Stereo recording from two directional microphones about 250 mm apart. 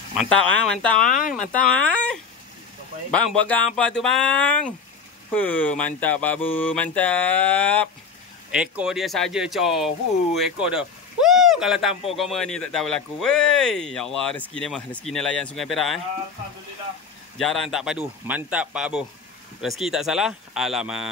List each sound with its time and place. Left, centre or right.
0.2 s speech: centre
1.0 s speech: left
1.5 s speech: centre
3.1 s speech: centre
17.4 s speech: centre